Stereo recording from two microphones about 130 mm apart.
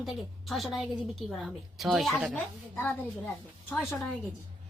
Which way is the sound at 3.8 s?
Centre (ahead or behind).